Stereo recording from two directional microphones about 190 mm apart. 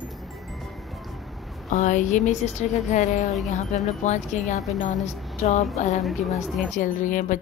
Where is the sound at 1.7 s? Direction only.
40° left (ahead or behind).